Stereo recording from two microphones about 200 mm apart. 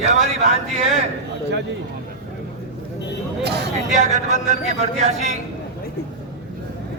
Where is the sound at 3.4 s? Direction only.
55° right (ahead or behind).